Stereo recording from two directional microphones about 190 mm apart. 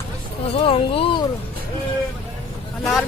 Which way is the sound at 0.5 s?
30° left (ahead or behind).